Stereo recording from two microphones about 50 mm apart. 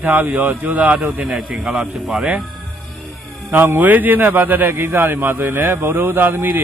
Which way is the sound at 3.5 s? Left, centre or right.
Right.